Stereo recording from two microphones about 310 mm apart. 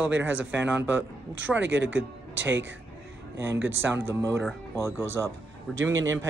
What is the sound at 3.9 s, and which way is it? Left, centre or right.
A man's voice, centre.